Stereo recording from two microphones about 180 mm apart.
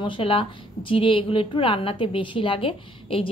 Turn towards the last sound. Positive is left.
turn(degrees=30)  # may be behind; listen again after turning